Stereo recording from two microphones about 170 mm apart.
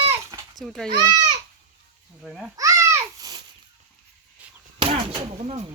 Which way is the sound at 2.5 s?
20° right (ahead or behind).